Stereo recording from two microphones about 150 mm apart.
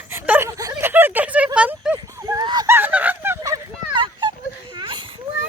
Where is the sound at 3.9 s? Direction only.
35° right (ahead or behind).